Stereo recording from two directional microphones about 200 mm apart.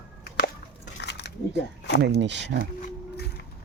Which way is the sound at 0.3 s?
50° left (ahead or behind).